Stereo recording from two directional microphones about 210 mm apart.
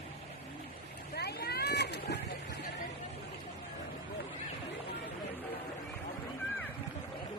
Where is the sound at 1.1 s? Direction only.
50° left (ahead or behind).